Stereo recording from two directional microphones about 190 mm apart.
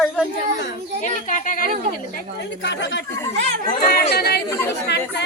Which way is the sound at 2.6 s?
65° left (ahead or behind).